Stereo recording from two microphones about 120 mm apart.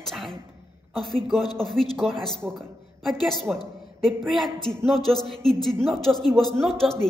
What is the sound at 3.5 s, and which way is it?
A woman's voice, 5° right (ahead or behind).